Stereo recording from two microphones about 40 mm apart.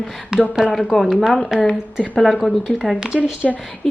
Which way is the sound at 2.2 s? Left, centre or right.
Centre.